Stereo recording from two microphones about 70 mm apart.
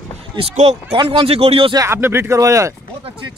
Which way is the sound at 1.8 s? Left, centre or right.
Right.